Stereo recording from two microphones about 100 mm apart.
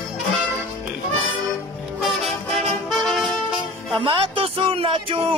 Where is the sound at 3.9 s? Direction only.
55° right (ahead or behind).